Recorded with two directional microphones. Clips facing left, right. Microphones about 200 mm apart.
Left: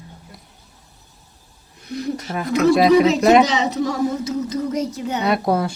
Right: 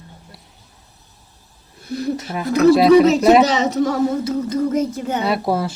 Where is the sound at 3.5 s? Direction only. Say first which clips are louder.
Right 3 dB; 45° right (ahead or behind).